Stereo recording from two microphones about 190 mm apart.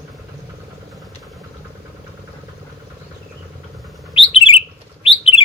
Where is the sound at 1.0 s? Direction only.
Centre (ahead or behind).